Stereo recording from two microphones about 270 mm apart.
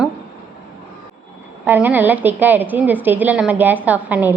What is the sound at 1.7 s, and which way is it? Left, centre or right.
A woman's voice, centre.